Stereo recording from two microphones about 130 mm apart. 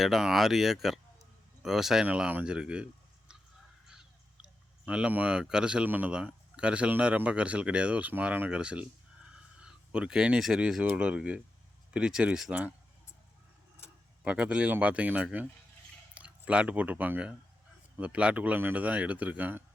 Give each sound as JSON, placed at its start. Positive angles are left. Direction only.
{"t": 0.0, "sound": "speech", "side_deg": 0}
{"t": 4.9, "sound": "speech", "side_deg": -10}
{"t": 14.3, "sound": "speech", "side_deg": -10}